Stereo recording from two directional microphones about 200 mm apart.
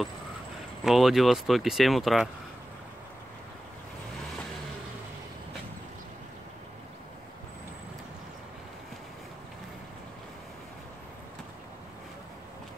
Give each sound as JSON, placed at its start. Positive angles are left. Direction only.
{"t": 0.8, "sound": "speech", "side_deg": 0}